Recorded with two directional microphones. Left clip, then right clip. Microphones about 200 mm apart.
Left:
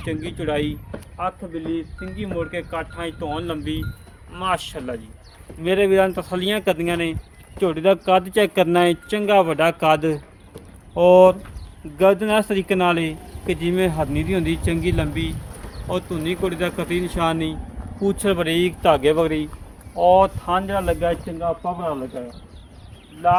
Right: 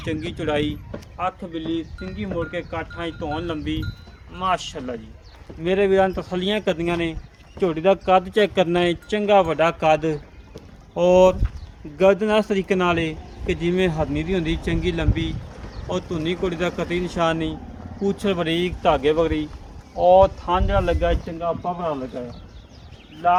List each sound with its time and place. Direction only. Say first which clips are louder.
0.0 s speech: even; 10° right (ahead or behind)
2.4 s speech: left 2 dB; 10° left (ahead or behind); by 10.2 s 35° left (ahead or behind)
10.9 s speech: left 3 dB; 25° left (ahead or behind)
18.0 s speech: left 2 dB; 35° left (ahead or behind); by 19.5 s 50° left (ahead or behind)
20.0 s speech: even; 30° left (ahead or behind); by 21.2 s 10° left (ahead or behind)
21.2 s speech: left 1 dB; 5° right (ahead or behind)
23.2 s speech: left 1 dB; 10° right (ahead or behind)